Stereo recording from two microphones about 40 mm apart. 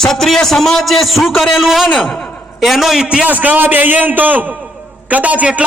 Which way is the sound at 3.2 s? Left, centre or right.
Right.